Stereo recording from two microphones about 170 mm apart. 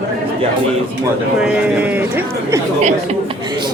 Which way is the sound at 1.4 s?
10° right (ahead or behind).